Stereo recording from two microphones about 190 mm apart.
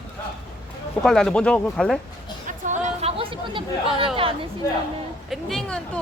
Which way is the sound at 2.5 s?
40° right (ahead or behind).